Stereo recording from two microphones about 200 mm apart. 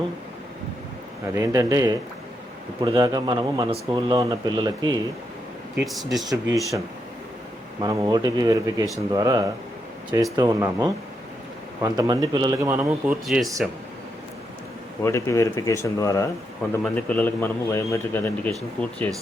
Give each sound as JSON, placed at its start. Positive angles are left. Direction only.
{"t": 1.3, "sound": "speech", "side_deg": -15}
{"t": 5.8, "sound": "speech", "side_deg": 0}
{"t": 6.2, "sound": "speech", "side_deg": -15}
{"t": 7.8, "sound": "speech", "side_deg": -20}
{"t": 15.0, "sound": "a man's voice", "side_deg": 15}